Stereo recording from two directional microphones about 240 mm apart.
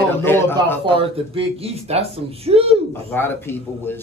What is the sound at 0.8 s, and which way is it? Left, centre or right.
Speech, right.